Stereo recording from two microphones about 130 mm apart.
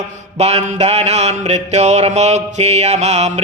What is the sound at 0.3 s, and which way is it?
Mantra, 55° right (ahead or behind).